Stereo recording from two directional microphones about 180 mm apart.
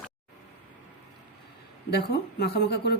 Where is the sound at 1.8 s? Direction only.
65° left (ahead or behind).